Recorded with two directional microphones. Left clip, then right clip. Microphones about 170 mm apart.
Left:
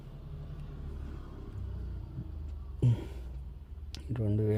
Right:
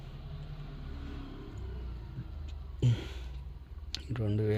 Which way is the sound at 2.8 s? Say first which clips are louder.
Even; 25° left (ahead or behind).